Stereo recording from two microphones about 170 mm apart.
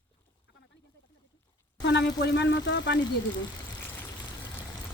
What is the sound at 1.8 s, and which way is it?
Speech, 90° left.